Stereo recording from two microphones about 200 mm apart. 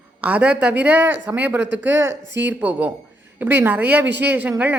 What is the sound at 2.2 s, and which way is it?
Speech, 60° right (ahead or behind).